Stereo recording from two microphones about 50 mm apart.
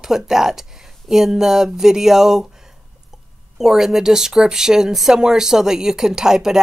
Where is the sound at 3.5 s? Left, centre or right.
Centre.